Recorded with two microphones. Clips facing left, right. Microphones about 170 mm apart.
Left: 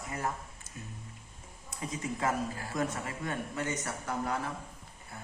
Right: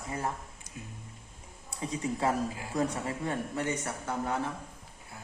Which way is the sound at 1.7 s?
30° right (ahead or behind).